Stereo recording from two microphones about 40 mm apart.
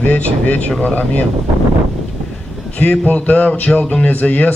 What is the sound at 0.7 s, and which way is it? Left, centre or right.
Speech, left.